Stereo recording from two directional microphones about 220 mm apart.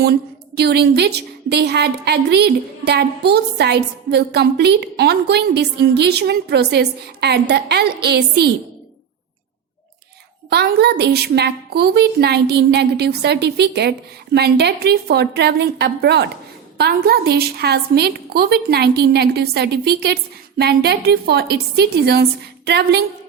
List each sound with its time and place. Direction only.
0.0 s a woman's voice: 45° right (ahead or behind)
10.5 s a woman's voice: 50° right (ahead or behind)